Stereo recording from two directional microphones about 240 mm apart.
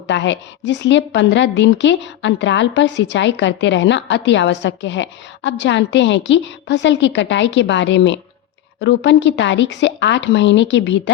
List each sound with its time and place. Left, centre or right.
0.1 s a woman's voice: left